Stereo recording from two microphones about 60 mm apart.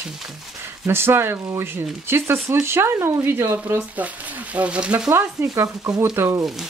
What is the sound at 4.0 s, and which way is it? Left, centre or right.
Speech, right.